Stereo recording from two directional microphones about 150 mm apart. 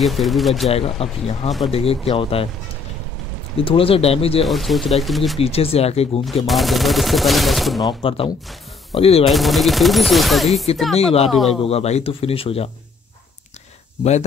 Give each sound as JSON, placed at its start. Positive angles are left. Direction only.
{"t": 0.0, "sound": "speech", "side_deg": 0}
{"t": 0.7, "sound": "speech", "side_deg": 40}
{"t": 3.5, "sound": "speech", "side_deg": 40}
{"t": 4.5, "sound": "speech", "side_deg": 0}
{"t": 5.4, "sound": "speech", "side_deg": 40}
{"t": 6.4, "sound": "speech", "side_deg": 0}
{"t": 7.8, "sound": "speech", "side_deg": 35}
{"t": 9.2, "sound": "speech", "side_deg": 0}
{"t": 11.0, "sound": "speech", "side_deg": 40}
{"t": 11.2, "sound": "speech", "side_deg": 0}
{"t": 11.6, "sound": "speech", "side_deg": 45}